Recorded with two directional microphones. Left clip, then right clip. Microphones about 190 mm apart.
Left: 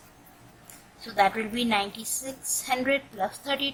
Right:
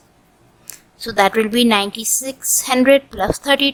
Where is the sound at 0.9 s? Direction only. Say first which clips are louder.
Right 9 dB; 40° right (ahead or behind).